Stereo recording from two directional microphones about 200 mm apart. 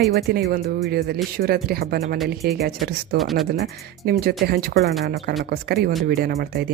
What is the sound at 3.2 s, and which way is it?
Speech, centre (ahead or behind).